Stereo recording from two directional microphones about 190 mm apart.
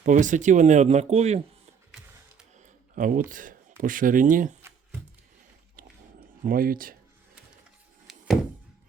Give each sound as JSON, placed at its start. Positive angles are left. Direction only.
{"t": 0.0, "sound": "speech", "side_deg": -40}
{"t": 2.6, "sound": "a sound", "side_deg": -45}
{"t": 3.2, "sound": "speech", "side_deg": -45}
{"t": 6.4, "sound": "speech", "side_deg": -50}
{"t": 8.1, "sound": "thunk", "side_deg": 0}